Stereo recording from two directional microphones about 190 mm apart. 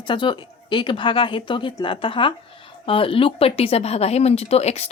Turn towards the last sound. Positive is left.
turn(degrees=35)  # may be behind; listen again after turning